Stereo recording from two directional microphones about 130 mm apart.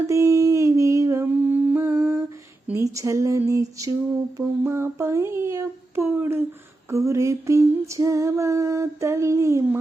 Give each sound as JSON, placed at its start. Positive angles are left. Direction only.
{"t": 0.1, "sound": "humming", "side_deg": -25}
{"t": 2.7, "sound": "female singing", "side_deg": -25}